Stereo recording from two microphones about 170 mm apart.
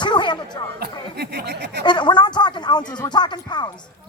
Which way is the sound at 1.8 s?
25° left (ahead or behind).